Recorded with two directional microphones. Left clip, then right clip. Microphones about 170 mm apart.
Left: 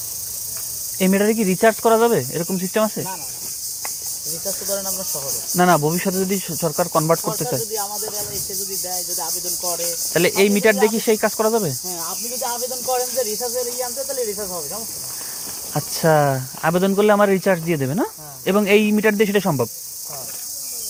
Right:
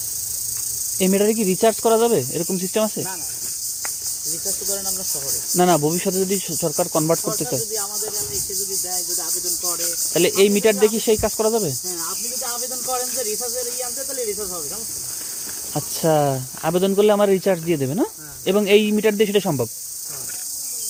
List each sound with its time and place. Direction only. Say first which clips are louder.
0.9 s speech: even; 20° right (ahead or behind)
5.5 s speech: left 1 dB; 20° right (ahead or behind)
9.7 s speech: left 1 dB; 10° right (ahead or behind)
15.7 s speech: left 2 dB; 15° right (ahead or behind)